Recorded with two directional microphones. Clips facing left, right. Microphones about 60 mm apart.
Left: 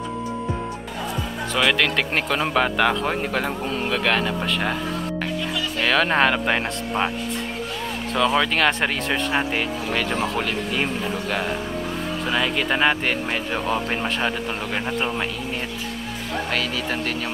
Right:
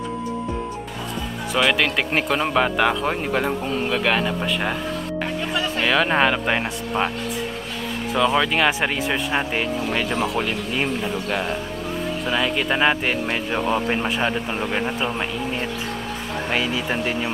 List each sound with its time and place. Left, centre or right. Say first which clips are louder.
1.5 s speech: right 1 dB; centre
5.8 s speech: even; centre
8.1 s speech: right 1 dB; centre
16.4 s speech: right 4 dB; centre